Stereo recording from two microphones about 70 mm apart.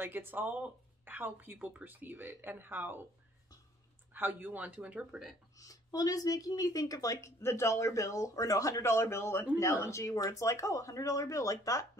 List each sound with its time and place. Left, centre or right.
0.0 s speech: right
4.1 s speech: right
5.6 s a woman's voice: left